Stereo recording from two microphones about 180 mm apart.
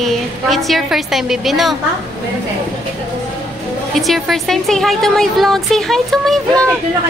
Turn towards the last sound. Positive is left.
turn(degrees=5)  # may be behind; listen again after turning